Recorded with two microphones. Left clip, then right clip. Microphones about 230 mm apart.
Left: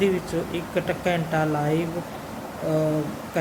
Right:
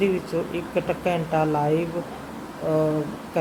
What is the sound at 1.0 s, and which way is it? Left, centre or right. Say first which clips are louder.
Speech: right 1 dB; centre.